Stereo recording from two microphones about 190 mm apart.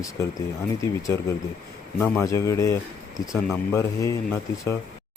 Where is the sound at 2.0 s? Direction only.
15° left (ahead or behind).